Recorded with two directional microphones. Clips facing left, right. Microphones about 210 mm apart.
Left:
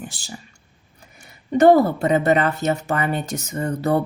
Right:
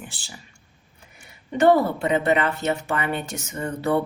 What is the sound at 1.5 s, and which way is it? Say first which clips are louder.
A woman's voice: left 4 dB; 40° left (ahead or behind).